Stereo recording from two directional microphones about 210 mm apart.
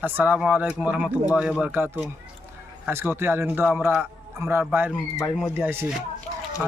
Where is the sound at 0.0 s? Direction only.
10° right (ahead or behind).